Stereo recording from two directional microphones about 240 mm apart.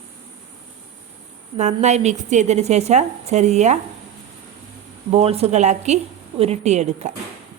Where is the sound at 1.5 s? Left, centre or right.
Right.